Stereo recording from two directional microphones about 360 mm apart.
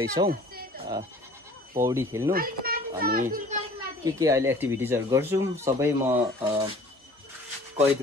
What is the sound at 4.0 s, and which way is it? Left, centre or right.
Speech, centre.